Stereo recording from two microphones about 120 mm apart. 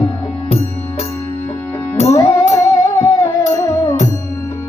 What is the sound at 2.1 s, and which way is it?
Music, 25° left (ahead or behind).